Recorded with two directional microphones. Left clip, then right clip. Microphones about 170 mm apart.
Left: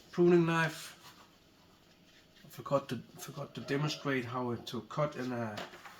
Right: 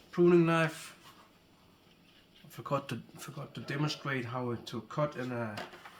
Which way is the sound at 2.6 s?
50° right (ahead or behind).